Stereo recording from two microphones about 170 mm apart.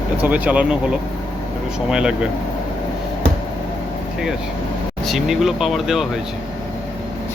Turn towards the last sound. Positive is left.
turn(degrees=0)  # may be behind; listen again after turning